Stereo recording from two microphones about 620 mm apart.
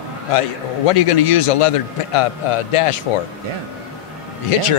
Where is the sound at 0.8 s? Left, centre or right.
Left.